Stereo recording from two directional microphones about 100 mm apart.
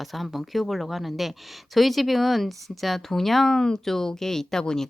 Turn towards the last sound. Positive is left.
turn(degrees=5)  # may be behind; listen again after turning